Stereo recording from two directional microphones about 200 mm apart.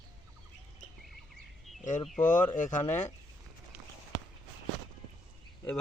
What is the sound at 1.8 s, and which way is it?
A man's voice, 40° left (ahead or behind).